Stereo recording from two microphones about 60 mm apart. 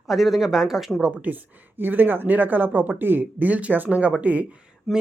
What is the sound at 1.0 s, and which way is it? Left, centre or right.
Speech, right.